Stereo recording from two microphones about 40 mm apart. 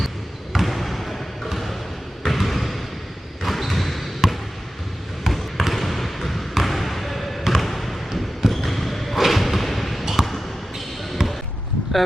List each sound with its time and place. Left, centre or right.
0.5 s basketball bounce: centre
5.2 s trickle: centre
6.5 s basketball bounce: centre
11.2 s basketball bounce: centre